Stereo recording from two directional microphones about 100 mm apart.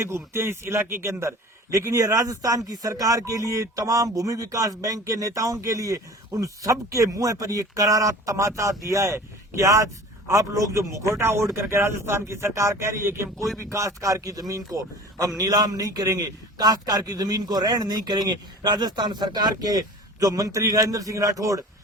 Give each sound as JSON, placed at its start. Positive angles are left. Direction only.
{"t": 0.0, "sound": "a man's voice", "side_deg": -25}